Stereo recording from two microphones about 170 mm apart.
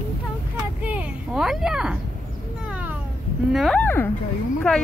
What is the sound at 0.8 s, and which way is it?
Speech, 10° right (ahead or behind).